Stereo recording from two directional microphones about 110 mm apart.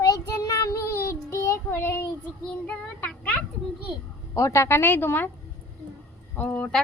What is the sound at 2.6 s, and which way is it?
Speech, 10° left (ahead or behind).